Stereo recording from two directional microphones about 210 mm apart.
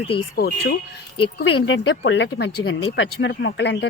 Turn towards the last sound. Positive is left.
turn(degrees=55)  # may be behind; listen again after turning